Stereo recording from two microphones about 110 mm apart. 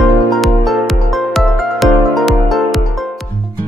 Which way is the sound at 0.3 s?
Centre (ahead or behind).